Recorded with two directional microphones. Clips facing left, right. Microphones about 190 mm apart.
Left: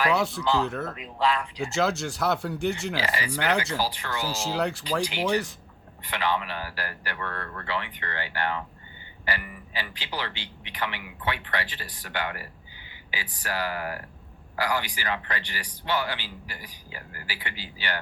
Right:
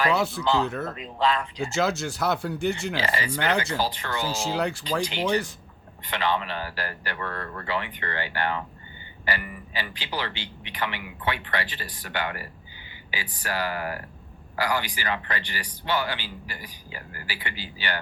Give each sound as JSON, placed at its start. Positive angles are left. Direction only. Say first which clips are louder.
{"t": 0.0, "sound": "a man's voice", "louder": "right 1 dB", "side_deg": 0}
{"t": 7.2, "sound": "speech", "louder": "right 2 dB", "side_deg": -5}
{"t": 7.9, "sound": "a man's voice", "louder": "right 3 dB", "side_deg": -50}